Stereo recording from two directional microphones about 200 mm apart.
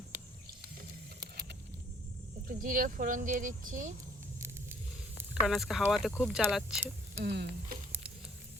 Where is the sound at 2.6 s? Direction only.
45° right (ahead or behind).